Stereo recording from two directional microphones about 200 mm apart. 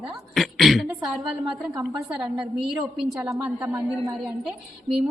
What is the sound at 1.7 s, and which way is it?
Speech, 15° right (ahead or behind).